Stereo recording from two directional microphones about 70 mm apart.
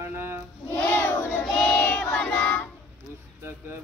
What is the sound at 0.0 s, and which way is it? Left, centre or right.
Choir, right.